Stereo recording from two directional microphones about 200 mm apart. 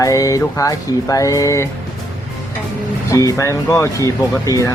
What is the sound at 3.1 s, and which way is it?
Speech, 15° left (ahead or behind).